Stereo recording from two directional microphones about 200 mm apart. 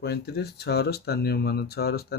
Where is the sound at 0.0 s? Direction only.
55° left (ahead or behind).